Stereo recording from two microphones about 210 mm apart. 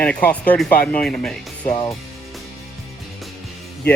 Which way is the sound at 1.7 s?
15° left (ahead or behind).